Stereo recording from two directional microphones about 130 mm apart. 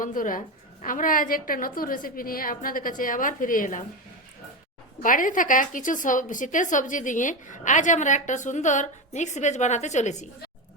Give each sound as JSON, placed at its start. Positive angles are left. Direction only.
{"t": 0.0, "sound": "a woman's voice", "side_deg": 90}
{"t": 5.0, "sound": "a woman's voice", "side_deg": 90}